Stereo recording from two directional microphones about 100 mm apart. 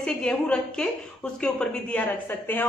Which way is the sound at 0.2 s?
10° left (ahead or behind).